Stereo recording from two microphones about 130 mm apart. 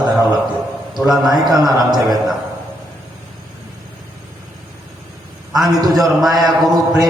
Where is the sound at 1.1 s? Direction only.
Centre (ahead or behind).